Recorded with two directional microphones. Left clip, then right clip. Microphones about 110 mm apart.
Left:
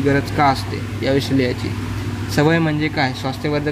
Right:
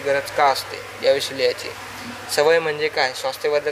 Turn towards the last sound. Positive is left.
turn(degrees=-40)  # may be behind; listen again after turning